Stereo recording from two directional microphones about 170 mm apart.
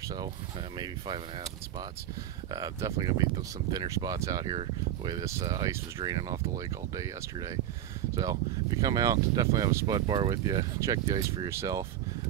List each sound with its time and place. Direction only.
0.7 s speech: 25° right (ahead or behind)
2.5 s speech: 20° right (ahead or behind)